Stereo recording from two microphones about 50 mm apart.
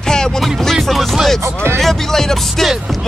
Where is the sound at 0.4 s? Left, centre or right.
Centre.